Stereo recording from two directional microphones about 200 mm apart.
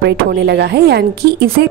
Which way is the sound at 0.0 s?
55° right (ahead or behind).